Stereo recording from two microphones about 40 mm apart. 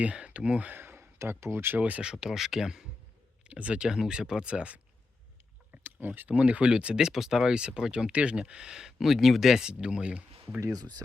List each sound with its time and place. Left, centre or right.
0.0 s speech: right
0.7 s speech: right
2.2 s speech: centre
3.4 s speech: right
3.8 s speech: centre
5.8 s speech: right
6.2 s speech: right; by 9.6 s centre
9.6 s speech: right